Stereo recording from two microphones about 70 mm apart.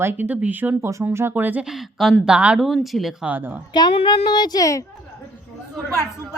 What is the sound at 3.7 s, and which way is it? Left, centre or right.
Speech, left.